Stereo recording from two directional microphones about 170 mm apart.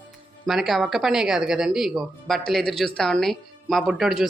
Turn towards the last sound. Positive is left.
turn(degrees=0)  # may be behind; listen again after turning